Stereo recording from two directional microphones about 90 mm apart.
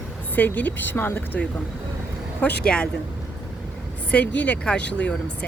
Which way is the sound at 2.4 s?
10° left (ahead or behind).